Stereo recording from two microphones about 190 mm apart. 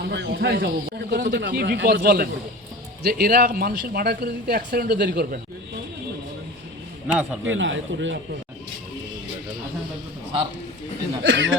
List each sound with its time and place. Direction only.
0.1 s a man's voice: 60° right (ahead or behind)
7.1 s speech: 5° right (ahead or behind)
7.4 s speech: 85° right
11.2 s speech: 85° right